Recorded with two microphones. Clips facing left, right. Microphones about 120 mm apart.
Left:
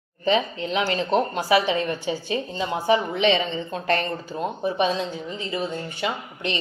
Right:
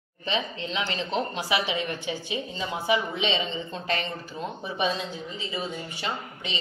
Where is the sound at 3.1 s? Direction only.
50° left (ahead or behind).